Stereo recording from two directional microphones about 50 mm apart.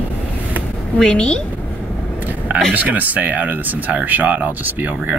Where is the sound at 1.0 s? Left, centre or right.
Centre.